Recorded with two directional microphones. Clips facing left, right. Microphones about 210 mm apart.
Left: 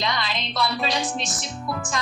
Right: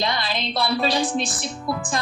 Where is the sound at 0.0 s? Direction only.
30° right (ahead or behind).